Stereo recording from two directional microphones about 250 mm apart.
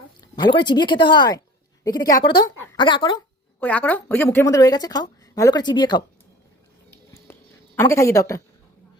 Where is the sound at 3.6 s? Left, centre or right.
Centre.